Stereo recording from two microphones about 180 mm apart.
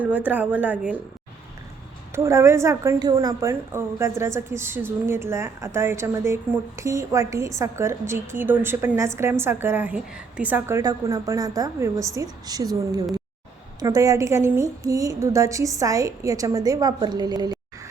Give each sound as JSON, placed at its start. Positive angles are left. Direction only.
{"t": 0.0, "sound": "a woman's voice", "side_deg": -10}
{"t": 2.1, "sound": "a woman's voice", "side_deg": -15}